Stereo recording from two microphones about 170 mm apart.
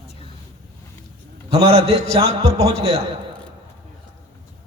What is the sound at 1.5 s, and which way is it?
A man's voice, 35° right (ahead or behind).